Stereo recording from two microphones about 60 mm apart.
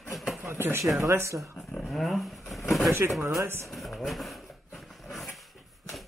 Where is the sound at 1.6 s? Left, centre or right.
Centre.